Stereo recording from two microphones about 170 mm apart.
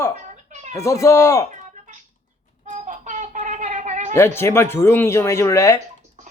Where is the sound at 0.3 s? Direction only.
45° right (ahead or behind).